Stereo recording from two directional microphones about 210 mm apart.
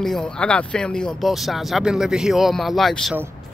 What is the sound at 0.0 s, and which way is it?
Speech, 5° left (ahead or behind).